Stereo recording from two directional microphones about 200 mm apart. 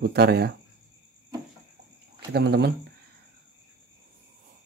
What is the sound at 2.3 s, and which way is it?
Speech, 55° right (ahead or behind).